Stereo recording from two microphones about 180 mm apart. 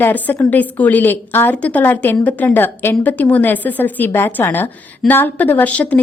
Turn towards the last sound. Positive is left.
turn(degrees=5)  # may be behind; listen again after turning